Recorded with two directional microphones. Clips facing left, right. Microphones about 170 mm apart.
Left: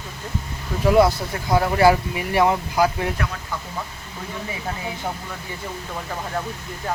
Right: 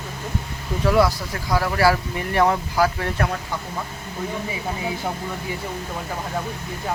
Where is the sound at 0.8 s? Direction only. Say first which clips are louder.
Left 3 dB; 20° left (ahead or behind).